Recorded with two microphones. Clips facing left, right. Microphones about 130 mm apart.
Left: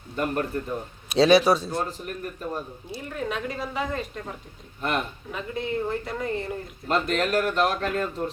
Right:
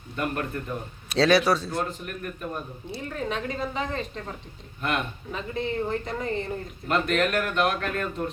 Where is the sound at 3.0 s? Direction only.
5° left (ahead or behind).